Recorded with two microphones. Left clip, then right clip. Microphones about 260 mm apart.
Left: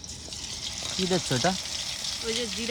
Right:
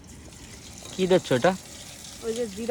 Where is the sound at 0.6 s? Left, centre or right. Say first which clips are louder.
Left 9 dB; centre.